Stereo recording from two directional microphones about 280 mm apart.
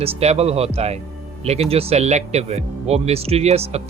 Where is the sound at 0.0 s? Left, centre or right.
Right.